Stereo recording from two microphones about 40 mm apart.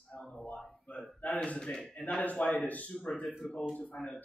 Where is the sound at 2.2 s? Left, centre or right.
Left.